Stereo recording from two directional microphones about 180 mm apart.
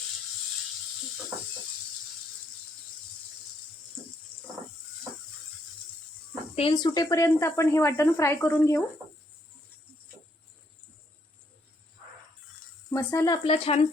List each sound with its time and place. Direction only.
4.3 s goat: 10° left (ahead or behind)
6.6 s speech: 25° left (ahead or behind)
12.9 s speech: 20° left (ahead or behind)
13.4 s speech: 30° left (ahead or behind)